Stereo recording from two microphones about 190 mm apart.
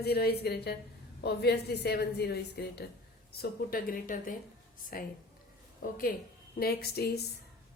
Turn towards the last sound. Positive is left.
turn(degrees=55)  # may be behind; listen again after turning